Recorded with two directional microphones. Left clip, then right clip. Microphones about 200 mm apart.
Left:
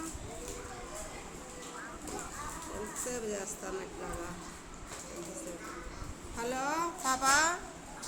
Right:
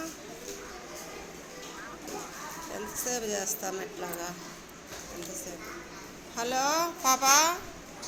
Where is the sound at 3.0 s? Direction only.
15° right (ahead or behind).